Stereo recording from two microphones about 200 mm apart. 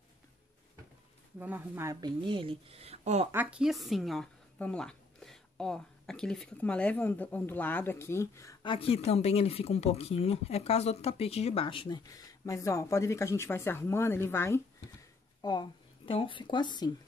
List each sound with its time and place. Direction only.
1.4 s a woman's voice: 10° right (ahead or behind); by 3.3 s 35° right (ahead or behind)
3.3 s a woman's voice: 5° right (ahead or behind); by 8.7 s 15° left (ahead or behind)
8.7 s speech: 30° left (ahead or behind)